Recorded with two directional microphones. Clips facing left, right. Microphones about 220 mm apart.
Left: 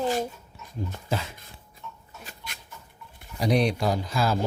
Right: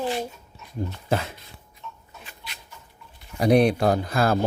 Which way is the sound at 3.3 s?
55° right (ahead or behind).